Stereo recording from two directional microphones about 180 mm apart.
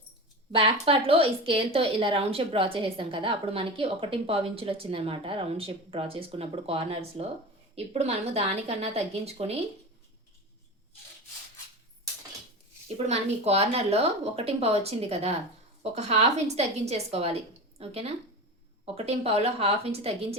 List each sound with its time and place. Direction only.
0.5 s speech: 30° right (ahead or behind)
13.1 s speech: 35° right (ahead or behind)